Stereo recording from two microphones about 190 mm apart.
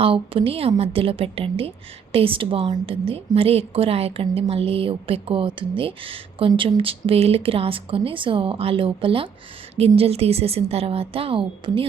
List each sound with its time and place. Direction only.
0.0 s a woman's voice: 30° right (ahead or behind)